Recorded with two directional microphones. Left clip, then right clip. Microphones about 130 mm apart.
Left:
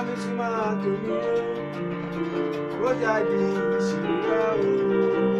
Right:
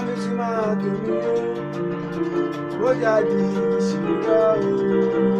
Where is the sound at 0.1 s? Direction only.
5° left (ahead or behind).